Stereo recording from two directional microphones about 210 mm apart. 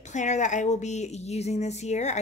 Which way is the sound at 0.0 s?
35° left (ahead or behind).